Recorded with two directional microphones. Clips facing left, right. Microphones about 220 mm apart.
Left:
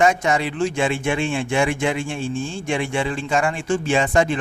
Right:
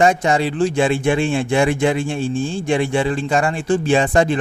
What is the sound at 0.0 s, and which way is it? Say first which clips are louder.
Speech: right 3 dB; 30° right (ahead or behind).